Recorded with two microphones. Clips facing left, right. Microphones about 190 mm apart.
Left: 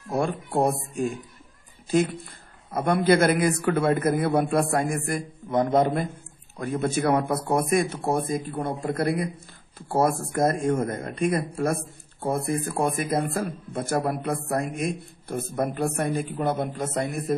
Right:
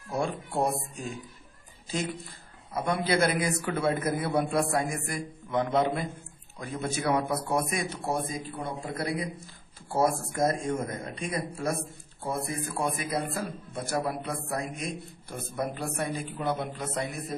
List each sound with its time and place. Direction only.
0.1 s a man's voice: 55° left (ahead or behind)